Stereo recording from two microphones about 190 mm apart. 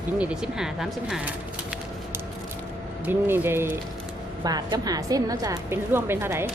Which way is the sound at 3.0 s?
10° right (ahead or behind).